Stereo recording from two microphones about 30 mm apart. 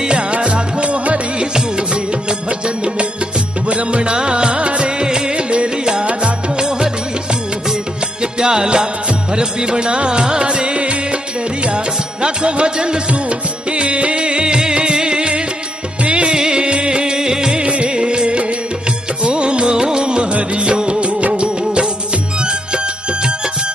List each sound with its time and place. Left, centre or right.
0.0 s music: right
1.4 s music: right
3.6 s music: right
8.2 s music: right
16.3 s music: right